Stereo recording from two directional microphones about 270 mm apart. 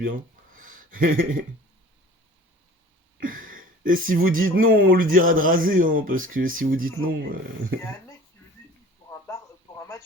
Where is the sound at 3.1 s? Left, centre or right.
Right.